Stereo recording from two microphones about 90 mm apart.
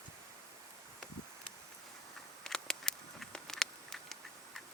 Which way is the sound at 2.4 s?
5° left (ahead or behind).